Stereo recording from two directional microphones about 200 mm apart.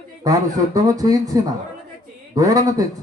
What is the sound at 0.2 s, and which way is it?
A man's voice, 20° right (ahead or behind).